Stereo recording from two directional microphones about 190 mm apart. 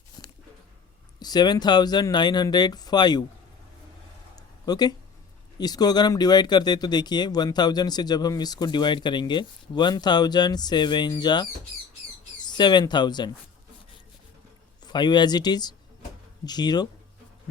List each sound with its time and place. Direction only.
1.2 s speech: 20° left (ahead or behind)
4.4 s a sound: 20° left (ahead or behind)
5.5 s speech: 20° left (ahead or behind)
14.8 s speech: 25° left (ahead or behind)